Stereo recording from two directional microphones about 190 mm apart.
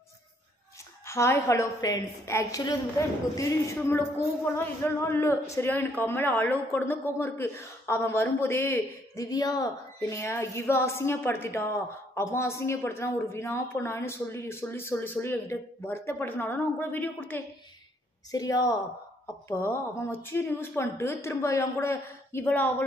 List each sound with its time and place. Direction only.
1.0 s speech: 15° left (ahead or behind)
18.3 s a woman's voice: 20° left (ahead or behind)